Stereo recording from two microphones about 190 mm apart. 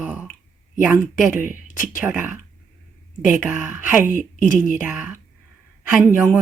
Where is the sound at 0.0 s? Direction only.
5° right (ahead or behind).